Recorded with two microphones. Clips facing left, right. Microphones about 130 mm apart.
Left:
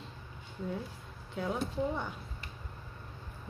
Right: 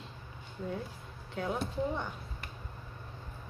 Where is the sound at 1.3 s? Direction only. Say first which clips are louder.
Even; centre (ahead or behind).